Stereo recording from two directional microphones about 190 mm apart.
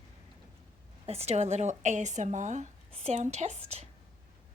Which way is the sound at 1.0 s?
35° right (ahead or behind).